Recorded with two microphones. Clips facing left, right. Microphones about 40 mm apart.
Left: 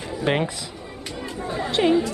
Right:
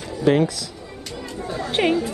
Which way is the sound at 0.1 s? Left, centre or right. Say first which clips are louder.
Right 5 dB; left.